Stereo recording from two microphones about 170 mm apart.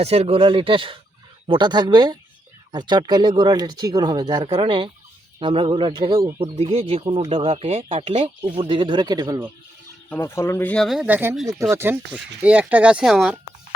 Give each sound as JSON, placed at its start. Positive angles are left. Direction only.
{"t": 0.0, "sound": "speech", "side_deg": -35}
{"t": 10.1, "sound": "speech", "side_deg": 15}